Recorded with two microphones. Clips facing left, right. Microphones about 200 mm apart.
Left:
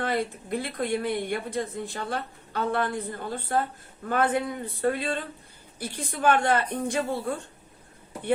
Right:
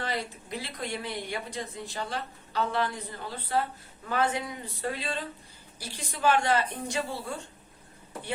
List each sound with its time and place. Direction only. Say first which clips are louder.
0.0 s a woman's voice: left 6 dB; 55° left (ahead or behind)